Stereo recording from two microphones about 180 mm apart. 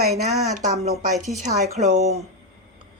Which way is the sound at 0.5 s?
40° right (ahead or behind).